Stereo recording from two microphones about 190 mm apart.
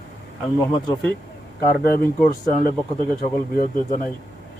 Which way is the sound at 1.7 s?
5° left (ahead or behind).